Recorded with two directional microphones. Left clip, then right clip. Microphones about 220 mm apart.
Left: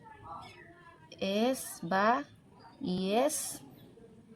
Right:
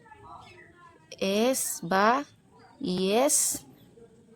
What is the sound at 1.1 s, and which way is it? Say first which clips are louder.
Speech: right 5 dB; 35° right (ahead or behind).